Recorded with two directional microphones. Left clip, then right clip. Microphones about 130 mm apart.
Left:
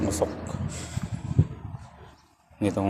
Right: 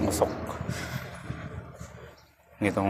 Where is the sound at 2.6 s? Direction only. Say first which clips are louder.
Even; 40° left (ahead or behind).